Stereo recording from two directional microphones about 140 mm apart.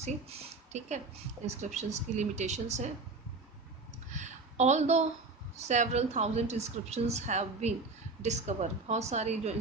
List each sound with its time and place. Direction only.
0.0 s a woman's voice: 55° right (ahead or behind)
4.1 s a sound: 55° right (ahead or behind)
5.5 s a woman's voice: 55° right (ahead or behind)